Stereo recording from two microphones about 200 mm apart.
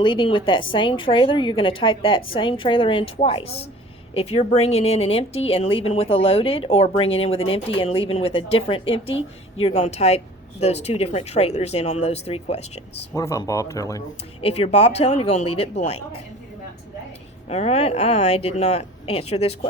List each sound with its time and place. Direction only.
0.0 s a woman's voice: 25° left (ahead or behind)
13.1 s speech: 15° left (ahead or behind)
14.4 s speech: 30° left (ahead or behind)
17.5 s speech: 30° left (ahead or behind)